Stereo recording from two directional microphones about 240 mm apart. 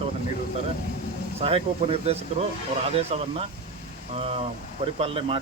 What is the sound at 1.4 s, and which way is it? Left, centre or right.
Speech, right.